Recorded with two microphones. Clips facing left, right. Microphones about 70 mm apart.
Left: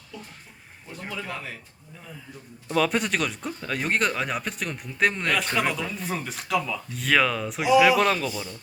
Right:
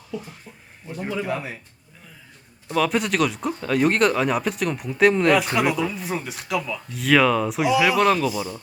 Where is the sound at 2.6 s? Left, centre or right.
Centre.